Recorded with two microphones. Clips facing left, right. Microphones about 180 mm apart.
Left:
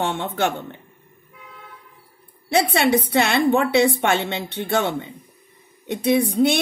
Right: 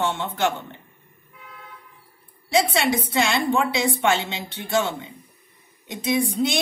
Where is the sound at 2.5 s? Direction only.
60° left (ahead or behind).